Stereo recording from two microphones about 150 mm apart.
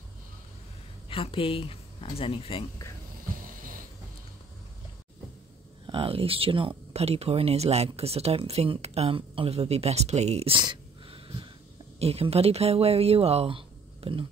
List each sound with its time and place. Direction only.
1.0 s speech: 40° left (ahead or behind)
5.9 s speech: 35° right (ahead or behind)